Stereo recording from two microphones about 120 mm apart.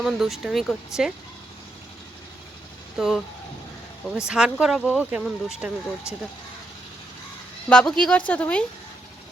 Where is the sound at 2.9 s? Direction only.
5° right (ahead or behind).